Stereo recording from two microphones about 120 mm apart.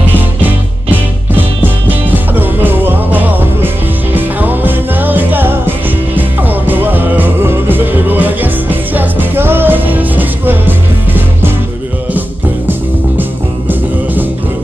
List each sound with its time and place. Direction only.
1.3 s music: 15° right (ahead or behind)
13.2 s music: 15° right (ahead or behind)